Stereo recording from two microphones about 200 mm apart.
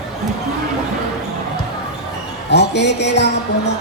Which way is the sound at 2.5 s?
60° left (ahead or behind).